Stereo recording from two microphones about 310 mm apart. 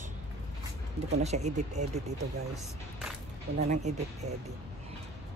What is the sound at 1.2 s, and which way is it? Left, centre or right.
Speech, right.